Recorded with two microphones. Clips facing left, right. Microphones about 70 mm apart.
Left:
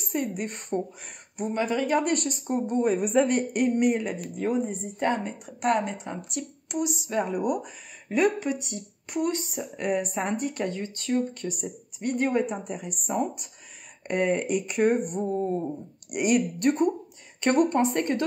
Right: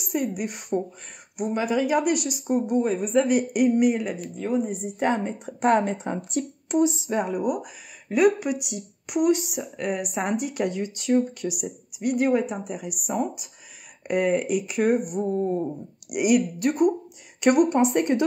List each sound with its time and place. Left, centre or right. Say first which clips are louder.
0.0 s speech: right 3 dB; centre
2.8 s speech: even; centre
3.3 s speech: right 3 dB; centre
4.6 s a woman's voice: right 2 dB; centre
7.2 s speech: right 1 dB; centre
9.6 s speech: left 1 dB; centre